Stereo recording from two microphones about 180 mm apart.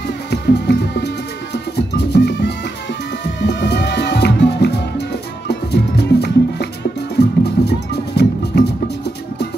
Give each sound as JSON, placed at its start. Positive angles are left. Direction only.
{"t": 0.3, "sound": "music", "side_deg": 70}